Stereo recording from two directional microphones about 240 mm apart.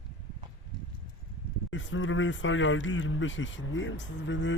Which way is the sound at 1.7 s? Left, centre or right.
Left.